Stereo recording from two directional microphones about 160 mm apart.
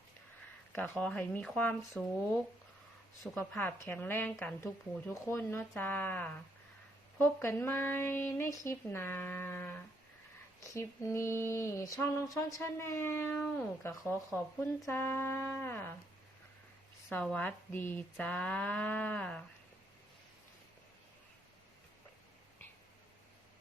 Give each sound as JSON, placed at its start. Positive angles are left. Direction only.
{"t": 0.7, "sound": "a woman's voice", "side_deg": 10}
{"t": 3.3, "sound": "a woman's voice", "side_deg": 10}
{"t": 17.2, "sound": "a woman's voice", "side_deg": 10}